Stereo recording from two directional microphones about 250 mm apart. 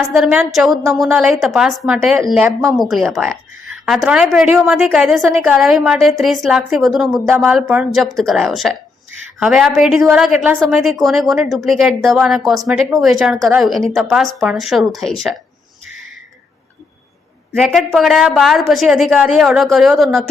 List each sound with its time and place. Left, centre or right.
0.1 s a woman's voice: centre
15.9 s a sound: right
17.5 s a woman's voice: centre